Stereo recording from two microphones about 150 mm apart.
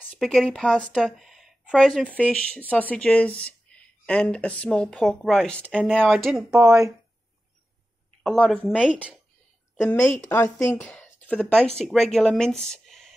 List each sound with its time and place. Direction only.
0.1 s a woman's voice: centre (ahead or behind)
8.2 s speech: 5° left (ahead or behind)
9.9 s speech: 20° left (ahead or behind); by 13.1 s 5° left (ahead or behind)